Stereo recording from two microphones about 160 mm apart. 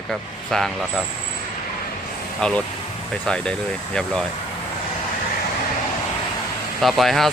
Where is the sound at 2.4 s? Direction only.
5° left (ahead or behind).